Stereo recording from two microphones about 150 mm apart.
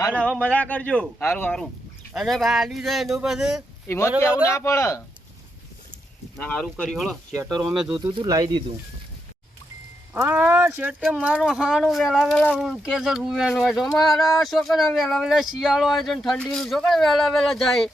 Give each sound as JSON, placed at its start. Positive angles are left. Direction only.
{"t": 0.1, "sound": "speech", "side_deg": 5}
{"t": 2.1, "sound": "speech", "side_deg": 0}
{"t": 3.8, "sound": "speech", "side_deg": 20}
{"t": 6.4, "sound": "speech", "side_deg": 10}
{"t": 7.9, "sound": "speech", "side_deg": -35}
{"t": 10.2, "sound": "speech", "side_deg": -15}